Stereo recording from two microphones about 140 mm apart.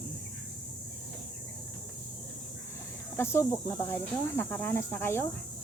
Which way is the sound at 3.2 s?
20° left (ahead or behind).